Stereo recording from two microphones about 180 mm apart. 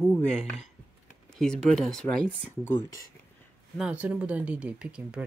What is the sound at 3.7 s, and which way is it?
Speech, 5° right (ahead or behind).